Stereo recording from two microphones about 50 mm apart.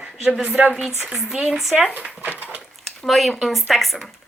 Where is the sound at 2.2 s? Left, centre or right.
Right.